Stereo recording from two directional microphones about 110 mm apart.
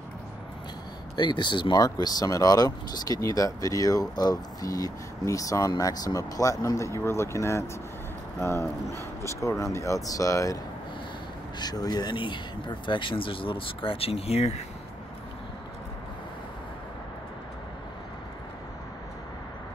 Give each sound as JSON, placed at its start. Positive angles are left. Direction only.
{"t": 1.1, "sound": "speech", "side_deg": 45}
{"t": 11.6, "sound": "speech", "side_deg": 35}